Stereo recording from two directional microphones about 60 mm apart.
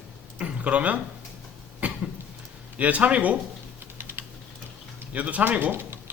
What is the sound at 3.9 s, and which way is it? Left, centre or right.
Typing, right.